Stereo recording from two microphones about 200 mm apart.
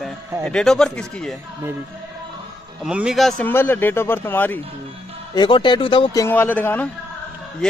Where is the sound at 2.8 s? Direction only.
5° right (ahead or behind).